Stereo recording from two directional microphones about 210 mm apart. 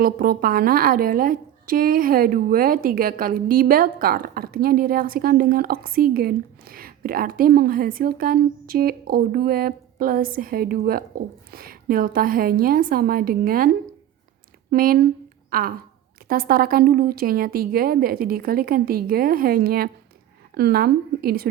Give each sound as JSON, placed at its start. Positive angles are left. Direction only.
{"t": 0.0, "sound": "a woman's voice", "side_deg": -45}
{"t": 14.7, "sound": "a woman's voice", "side_deg": -45}